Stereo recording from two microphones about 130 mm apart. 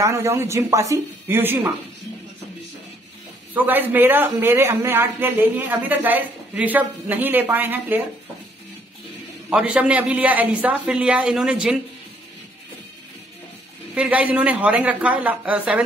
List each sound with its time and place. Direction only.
0.0 s speech: 20° right (ahead or behind)
3.5 s speech: 15° right (ahead or behind)
9.5 s speech: 5° right (ahead or behind)
13.9 s speech: 10° right (ahead or behind)